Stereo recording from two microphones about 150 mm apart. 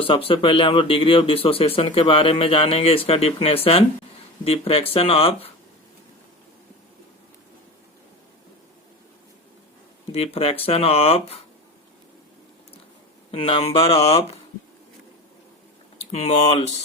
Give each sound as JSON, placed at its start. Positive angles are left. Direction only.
{"t": 0.0, "sound": "speech", "side_deg": 40}
{"t": 10.1, "sound": "speech", "side_deg": 40}
{"t": 13.3, "sound": "speech", "side_deg": 35}
{"t": 16.1, "sound": "speech", "side_deg": 45}